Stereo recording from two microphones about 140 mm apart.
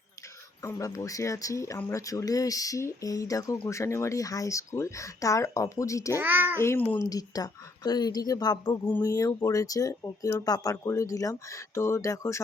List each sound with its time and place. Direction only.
0.6 s speech: 20° left (ahead or behind)
6.1 s child singing: 15° right (ahead or behind)
6.6 s a child's voice: 15° left (ahead or behind)
7.0 s speech: 25° left (ahead or behind)